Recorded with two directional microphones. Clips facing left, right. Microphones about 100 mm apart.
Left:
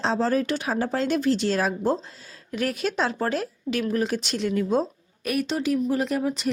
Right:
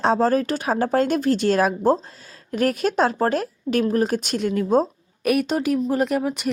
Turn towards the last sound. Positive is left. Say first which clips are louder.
# right 1 dB
turn(degrees=-60)  # may be behind; listen again after turning